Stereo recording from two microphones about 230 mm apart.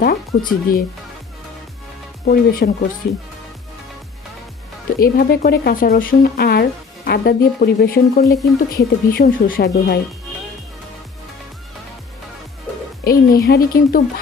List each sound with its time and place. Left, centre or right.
0.0 s speech: left
2.2 s speech: left
4.9 s speech: left
13.0 s speech: left